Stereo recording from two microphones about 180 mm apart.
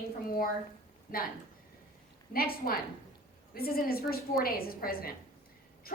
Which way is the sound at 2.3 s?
55° left (ahead or behind).